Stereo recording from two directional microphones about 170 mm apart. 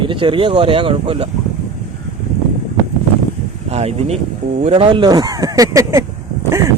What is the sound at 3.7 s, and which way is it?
Speech, 40° right (ahead or behind).